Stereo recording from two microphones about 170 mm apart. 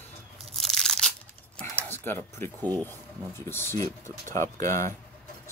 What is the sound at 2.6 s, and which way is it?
Speech, 25° right (ahead or behind).